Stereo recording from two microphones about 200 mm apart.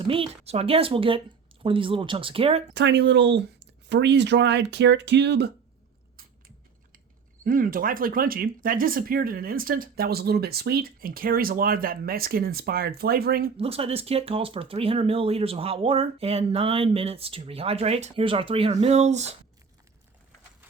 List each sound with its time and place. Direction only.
0.1 s speech: 30° right (ahead or behind)
2.7 s speech: 60° right (ahead or behind)
7.4 s speech: 45° right (ahead or behind)
13.6 s speech: 30° right (ahead or behind)